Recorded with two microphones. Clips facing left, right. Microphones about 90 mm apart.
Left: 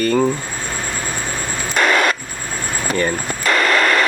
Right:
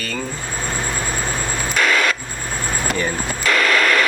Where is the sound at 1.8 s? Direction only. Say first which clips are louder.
Left 3 dB; 35° left (ahead or behind).